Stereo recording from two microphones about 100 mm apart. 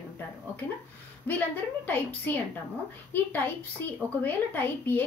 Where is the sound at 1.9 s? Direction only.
15° left (ahead or behind).